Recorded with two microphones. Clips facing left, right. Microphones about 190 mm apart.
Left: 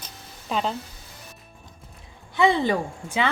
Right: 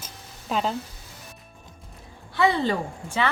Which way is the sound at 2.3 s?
15° left (ahead or behind).